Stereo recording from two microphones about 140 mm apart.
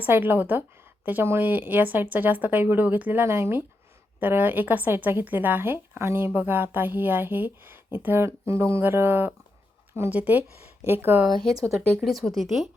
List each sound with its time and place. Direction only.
0.0 s speech: 15° right (ahead or behind)
11.3 s speech: 30° right (ahead or behind)
12.0 s speech: centre (ahead or behind)